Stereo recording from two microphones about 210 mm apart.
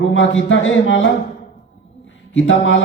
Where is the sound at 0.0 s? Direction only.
65° left (ahead or behind).